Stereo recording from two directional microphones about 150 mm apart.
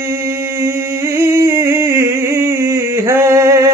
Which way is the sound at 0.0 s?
20° right (ahead or behind).